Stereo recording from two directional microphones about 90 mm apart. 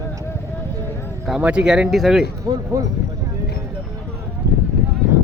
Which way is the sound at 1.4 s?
10° right (ahead or behind).